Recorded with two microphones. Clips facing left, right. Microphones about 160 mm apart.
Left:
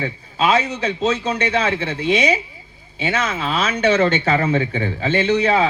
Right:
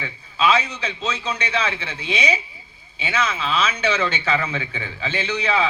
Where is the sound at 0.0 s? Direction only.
45° left (ahead or behind).